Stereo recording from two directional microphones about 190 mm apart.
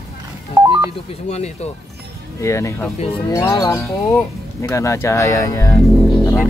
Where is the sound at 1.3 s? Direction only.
35° left (ahead or behind).